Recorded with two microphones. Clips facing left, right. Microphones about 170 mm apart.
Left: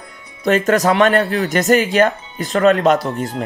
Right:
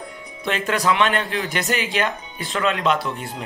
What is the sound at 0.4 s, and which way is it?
Speech, 45° left (ahead or behind).